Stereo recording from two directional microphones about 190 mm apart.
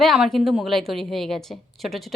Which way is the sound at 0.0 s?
Centre (ahead or behind).